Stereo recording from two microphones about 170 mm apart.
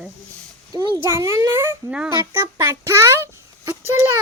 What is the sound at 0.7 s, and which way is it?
A child's voice, 20° right (ahead or behind).